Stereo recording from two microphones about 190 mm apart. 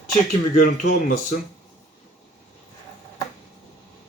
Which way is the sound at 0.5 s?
45° left (ahead or behind).